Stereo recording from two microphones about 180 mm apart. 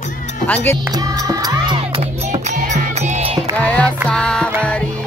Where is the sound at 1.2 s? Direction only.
20° right (ahead or behind).